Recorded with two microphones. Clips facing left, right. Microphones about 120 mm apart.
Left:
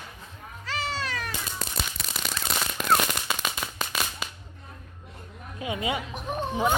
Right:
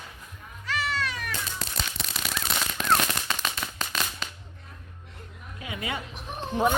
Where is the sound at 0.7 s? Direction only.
30° left (ahead or behind).